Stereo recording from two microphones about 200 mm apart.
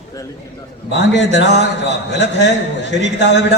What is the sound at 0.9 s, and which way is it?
A man's voice, 60° left (ahead or behind).